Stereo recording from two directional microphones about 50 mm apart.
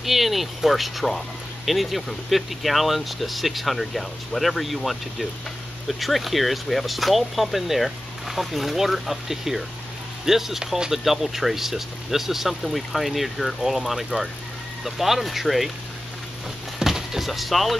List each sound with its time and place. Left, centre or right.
0.0 s speech: centre
16.8 s music: centre